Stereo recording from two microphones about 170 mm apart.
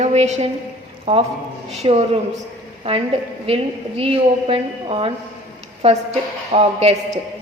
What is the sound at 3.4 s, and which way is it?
A woman's voice, 35° right (ahead or behind).